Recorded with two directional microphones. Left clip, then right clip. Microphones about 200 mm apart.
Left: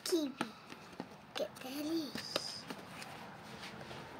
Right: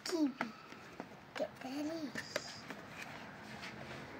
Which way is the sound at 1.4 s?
50° left (ahead or behind).